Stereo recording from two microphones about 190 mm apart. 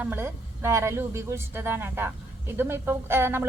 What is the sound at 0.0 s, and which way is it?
Speech, 10° right (ahead or behind).